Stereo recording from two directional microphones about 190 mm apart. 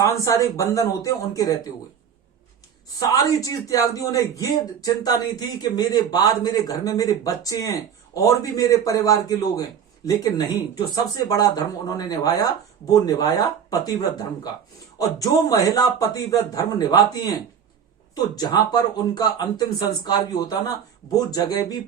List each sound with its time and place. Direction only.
0.0 s speech: 15° left (ahead or behind)
3.1 s speech: 20° left (ahead or behind)
14.9 s speech: 20° left (ahead or behind)